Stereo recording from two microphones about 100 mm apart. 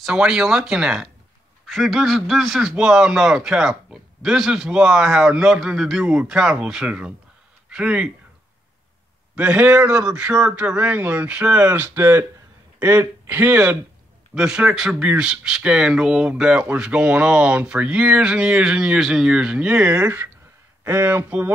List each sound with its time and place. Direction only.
0.0 s a man's voice: 5° right (ahead or behind)
9.3 s speech: 10° right (ahead or behind)
12.7 s a sound: 15° right (ahead or behind)
13.3 s speech: 15° right (ahead or behind)